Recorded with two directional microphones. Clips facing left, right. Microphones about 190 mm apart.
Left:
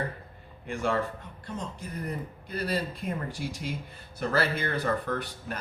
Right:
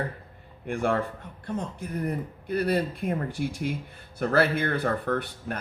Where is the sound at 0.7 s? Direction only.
55° right (ahead or behind).